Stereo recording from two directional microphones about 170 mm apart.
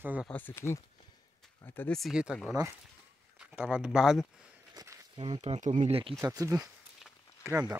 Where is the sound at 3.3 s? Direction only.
5° right (ahead or behind).